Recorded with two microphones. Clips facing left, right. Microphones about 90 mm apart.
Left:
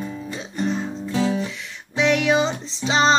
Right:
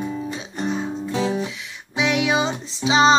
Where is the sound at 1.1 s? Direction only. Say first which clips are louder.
Left 1 dB; 15° right (ahead or behind).